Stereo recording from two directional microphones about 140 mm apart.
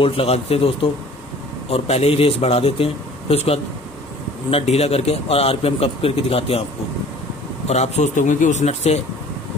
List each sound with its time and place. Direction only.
0.0 s a man's voice: 45° left (ahead or behind)
7.6 s a man's voice: 50° left (ahead or behind)